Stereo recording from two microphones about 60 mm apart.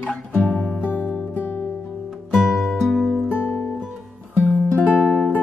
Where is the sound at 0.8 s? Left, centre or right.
Left.